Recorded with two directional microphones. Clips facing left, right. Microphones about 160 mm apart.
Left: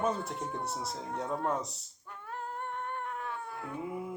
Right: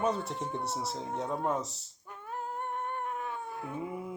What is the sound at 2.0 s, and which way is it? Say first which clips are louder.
Cat: right 2 dB; 15° right (ahead or behind).